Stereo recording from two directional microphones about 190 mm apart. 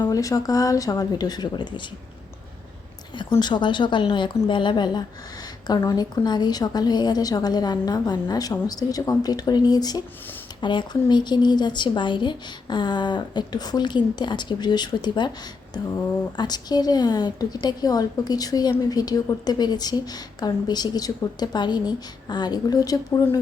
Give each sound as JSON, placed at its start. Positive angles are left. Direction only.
{"t": 0.0, "sound": "a woman's voice", "side_deg": 20}
{"t": 3.3, "sound": "a woman's voice", "side_deg": 25}
{"t": 16.4, "sound": "a woman's voice", "side_deg": 20}